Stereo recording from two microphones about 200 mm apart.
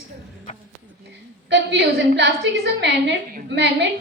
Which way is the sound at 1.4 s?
60° right (ahead or behind).